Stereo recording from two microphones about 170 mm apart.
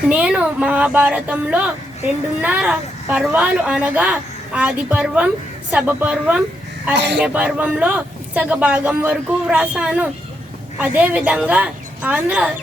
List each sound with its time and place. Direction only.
0.1 s speech: 5° right (ahead or behind)
6.9 s speech: 85° right
7.2 s speech: 5° right (ahead or behind)